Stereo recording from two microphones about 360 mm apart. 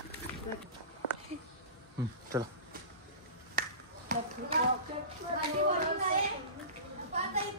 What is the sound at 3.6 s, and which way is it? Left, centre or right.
Finger snapping, right.